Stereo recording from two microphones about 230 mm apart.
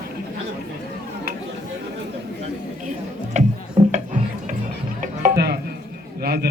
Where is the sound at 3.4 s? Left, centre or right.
Right.